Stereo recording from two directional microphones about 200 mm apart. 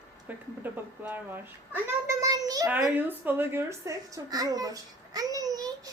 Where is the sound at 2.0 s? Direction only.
15° right (ahead or behind).